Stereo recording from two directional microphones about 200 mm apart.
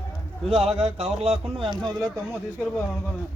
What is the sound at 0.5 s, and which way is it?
Speech, 30° right (ahead or behind).